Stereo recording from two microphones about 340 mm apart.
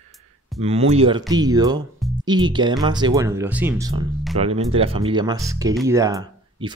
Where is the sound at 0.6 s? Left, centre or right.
Centre.